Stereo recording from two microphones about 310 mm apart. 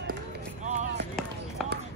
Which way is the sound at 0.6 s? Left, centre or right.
Right.